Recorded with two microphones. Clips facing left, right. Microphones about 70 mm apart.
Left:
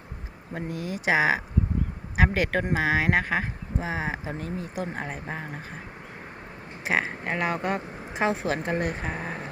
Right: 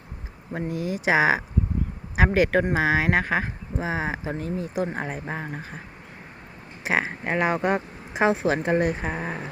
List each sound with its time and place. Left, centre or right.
0.5 s speech: centre
5.2 s speech: centre
6.8 s speech: centre